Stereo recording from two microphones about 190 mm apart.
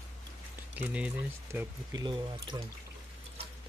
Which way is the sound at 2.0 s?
25° right (ahead or behind).